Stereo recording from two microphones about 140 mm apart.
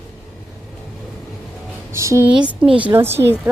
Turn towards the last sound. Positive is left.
turn(degrees=-15)  # may be behind; listen again after turning